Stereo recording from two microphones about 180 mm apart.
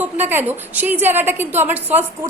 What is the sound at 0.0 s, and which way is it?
A woman's voice, 10° right (ahead or behind).